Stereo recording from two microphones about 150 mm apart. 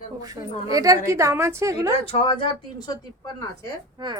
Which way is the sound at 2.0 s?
40° left (ahead or behind).